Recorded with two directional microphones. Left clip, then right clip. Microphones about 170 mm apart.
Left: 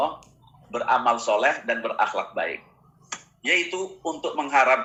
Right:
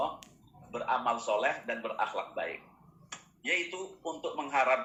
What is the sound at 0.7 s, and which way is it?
A man's voice, 30° left (ahead or behind).